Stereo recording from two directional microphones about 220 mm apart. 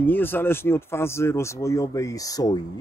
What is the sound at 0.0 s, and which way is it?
Speech, 10° left (ahead or behind).